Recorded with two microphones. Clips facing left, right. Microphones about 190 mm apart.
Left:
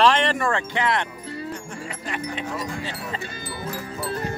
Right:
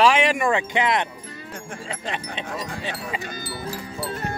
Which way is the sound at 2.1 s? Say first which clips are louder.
Left 2 dB; 25° right (ahead or behind).